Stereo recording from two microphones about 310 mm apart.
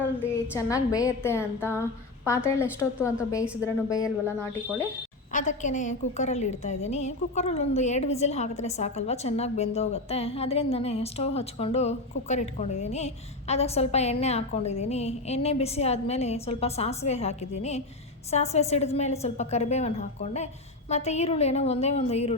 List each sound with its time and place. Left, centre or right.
0.5 s a woman's voice: centre
5.3 s a woman's voice: left